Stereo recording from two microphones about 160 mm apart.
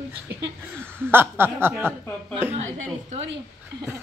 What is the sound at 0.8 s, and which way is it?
Speech, 15° right (ahead or behind).